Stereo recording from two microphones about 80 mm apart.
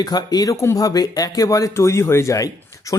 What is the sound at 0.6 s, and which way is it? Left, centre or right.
Speech, left.